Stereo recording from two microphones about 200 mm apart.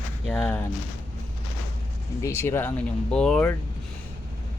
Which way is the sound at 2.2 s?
15° left (ahead or behind).